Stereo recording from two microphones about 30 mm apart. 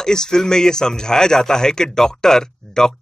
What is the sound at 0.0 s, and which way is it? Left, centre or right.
Speech, left.